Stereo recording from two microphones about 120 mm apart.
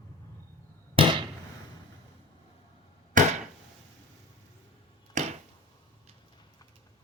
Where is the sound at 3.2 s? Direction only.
90° right.